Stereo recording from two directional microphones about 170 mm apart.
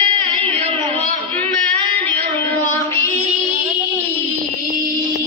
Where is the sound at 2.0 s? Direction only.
15° left (ahead or behind).